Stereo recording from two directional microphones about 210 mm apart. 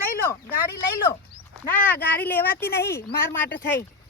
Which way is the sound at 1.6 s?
10° left (ahead or behind).